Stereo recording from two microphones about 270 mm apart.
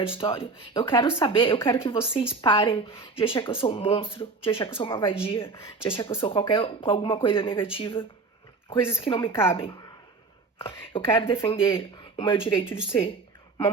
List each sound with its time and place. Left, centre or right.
0.1 s a woman's voice: centre